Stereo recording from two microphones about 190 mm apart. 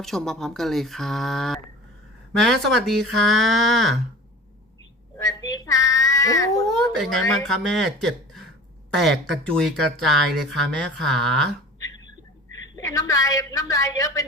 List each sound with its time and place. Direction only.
0.0 s speech: centre (ahead or behind)
5.1 s a sound: 15° left (ahead or behind)
6.9 s speech: centre (ahead or behind)
12.7 s a woman's voice: 20° left (ahead or behind)